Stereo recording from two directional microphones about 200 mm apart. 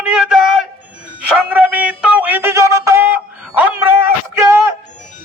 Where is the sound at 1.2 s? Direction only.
5° right (ahead or behind).